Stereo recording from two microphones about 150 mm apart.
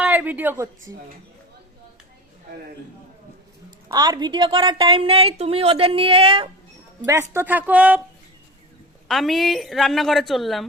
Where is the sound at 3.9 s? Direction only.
30° right (ahead or behind).